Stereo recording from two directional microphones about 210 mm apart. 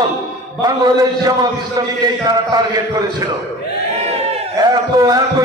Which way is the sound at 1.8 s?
15° right (ahead or behind).